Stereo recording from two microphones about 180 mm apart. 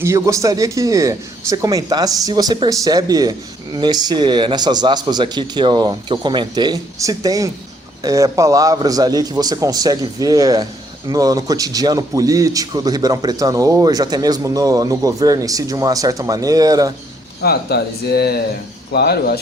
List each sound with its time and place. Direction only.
0.0 s speech: 15° right (ahead or behind)
17.4 s speech: 65° left (ahead or behind)